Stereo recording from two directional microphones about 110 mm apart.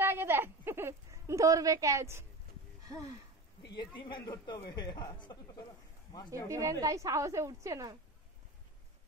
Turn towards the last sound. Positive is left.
turn(degrees=-30)  # may be behind; listen again after turning